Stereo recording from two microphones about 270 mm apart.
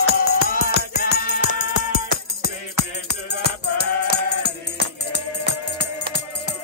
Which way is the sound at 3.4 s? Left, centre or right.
Left.